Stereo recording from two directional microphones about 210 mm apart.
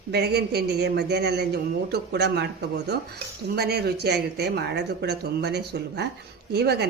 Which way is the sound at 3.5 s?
50° right (ahead or behind).